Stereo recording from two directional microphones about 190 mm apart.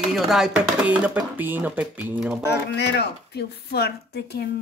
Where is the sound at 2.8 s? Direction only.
60° left (ahead or behind).